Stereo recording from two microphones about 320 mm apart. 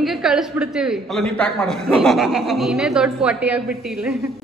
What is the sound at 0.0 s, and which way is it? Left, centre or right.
A woman's voice, centre.